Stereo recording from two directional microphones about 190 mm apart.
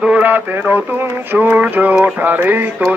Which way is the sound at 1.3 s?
10° right (ahead or behind).